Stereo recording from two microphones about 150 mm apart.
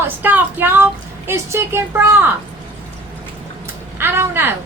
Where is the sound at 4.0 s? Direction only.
15° right (ahead or behind).